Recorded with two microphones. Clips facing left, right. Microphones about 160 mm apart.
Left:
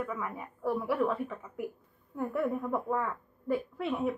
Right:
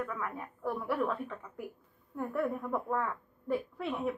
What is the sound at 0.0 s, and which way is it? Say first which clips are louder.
A woman's voice: left 1 dB; 5° left (ahead or behind).